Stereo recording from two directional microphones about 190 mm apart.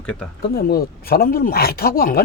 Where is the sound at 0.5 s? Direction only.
50° left (ahead or behind).